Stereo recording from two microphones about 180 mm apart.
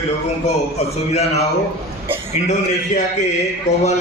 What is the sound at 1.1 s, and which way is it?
Speech, 35° left (ahead or behind).